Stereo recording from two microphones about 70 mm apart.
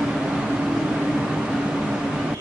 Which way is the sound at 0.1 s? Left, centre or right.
Centre.